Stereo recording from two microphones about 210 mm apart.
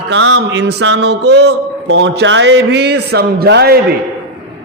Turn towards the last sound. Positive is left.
turn(degrees=-50)  # may be behind; listen again after turning